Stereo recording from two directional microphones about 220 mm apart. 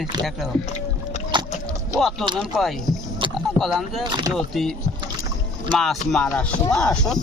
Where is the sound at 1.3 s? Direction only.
20° right (ahead or behind).